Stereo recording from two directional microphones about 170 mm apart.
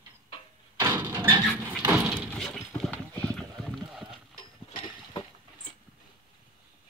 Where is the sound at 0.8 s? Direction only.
20° right (ahead or behind).